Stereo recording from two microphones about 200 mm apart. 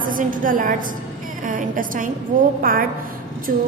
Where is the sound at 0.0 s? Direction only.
45° right (ahead or behind).